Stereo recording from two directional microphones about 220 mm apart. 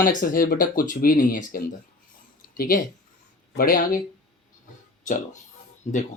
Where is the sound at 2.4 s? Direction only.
40° left (ahead or behind).